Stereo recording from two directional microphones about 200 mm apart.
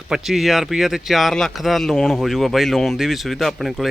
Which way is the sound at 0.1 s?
Centre (ahead or behind).